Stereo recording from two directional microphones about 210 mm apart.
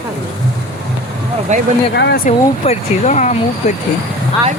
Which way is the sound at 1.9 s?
50° left (ahead or behind).